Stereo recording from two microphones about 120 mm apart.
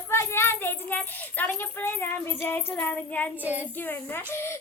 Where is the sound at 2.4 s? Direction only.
20° left (ahead or behind).